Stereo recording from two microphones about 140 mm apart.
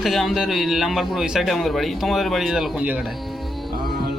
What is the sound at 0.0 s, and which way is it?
A man's voice, centre (ahead or behind).